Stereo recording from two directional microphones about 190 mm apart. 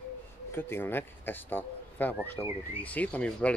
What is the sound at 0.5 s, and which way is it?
Speech, 10° left (ahead or behind).